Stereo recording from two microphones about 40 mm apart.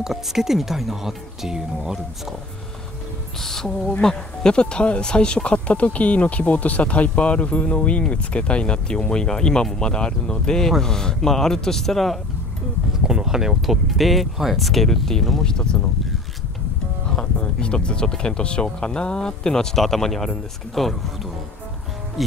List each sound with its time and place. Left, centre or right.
0.0 s speech: centre
3.3 s music: centre
4.0 s speech: centre
13.0 s speech: centre
17.1 s speech: left
19.8 s speech: centre